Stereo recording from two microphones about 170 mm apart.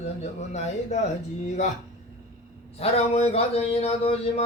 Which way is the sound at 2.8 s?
35° left (ahead or behind).